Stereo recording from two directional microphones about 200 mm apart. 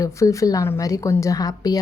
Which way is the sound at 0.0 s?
15° left (ahead or behind).